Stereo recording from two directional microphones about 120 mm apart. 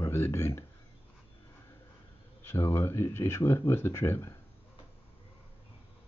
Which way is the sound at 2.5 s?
20° left (ahead or behind).